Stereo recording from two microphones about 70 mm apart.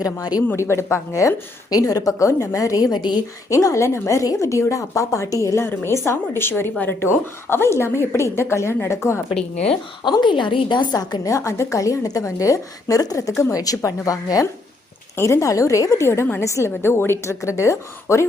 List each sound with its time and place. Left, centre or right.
0.0 s a woman's voice: left
0.5 s a woman's voice: left
1.7 s a woman's voice: left
3.5 s a woman's voice: left
10.0 s a woman's voice: left
11.3 s a woman's voice: left
13.3 s a woman's voice: left
13.6 s a woman's voice: left
15.1 s a woman's voice: left